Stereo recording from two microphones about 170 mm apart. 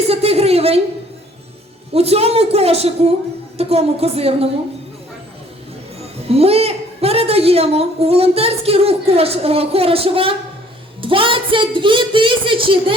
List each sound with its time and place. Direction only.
0.1 s a woman's voice: 35° right (ahead or behind)
1.9 s a woman's voice: 35° right (ahead or behind)
6.3 s a woman's voice: 35° right (ahead or behind)